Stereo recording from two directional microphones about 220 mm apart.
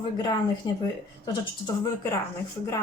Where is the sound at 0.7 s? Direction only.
20° left (ahead or behind).